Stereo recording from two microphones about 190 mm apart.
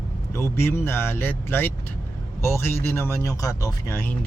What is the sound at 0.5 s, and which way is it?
Speech, 10° left (ahead or behind).